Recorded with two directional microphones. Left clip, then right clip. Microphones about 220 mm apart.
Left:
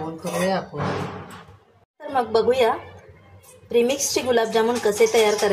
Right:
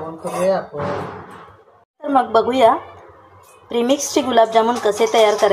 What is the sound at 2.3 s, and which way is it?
A woman's voice, 15° right (ahead or behind).